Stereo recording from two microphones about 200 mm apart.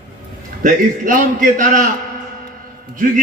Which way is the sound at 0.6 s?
40° right (ahead or behind).